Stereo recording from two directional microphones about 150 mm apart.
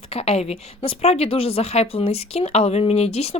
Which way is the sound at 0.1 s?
40° left (ahead or behind).